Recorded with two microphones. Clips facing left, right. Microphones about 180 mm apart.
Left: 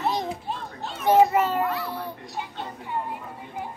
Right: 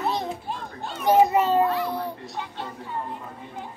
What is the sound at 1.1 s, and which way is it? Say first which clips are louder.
Children playing: even; 20° right (ahead or behind).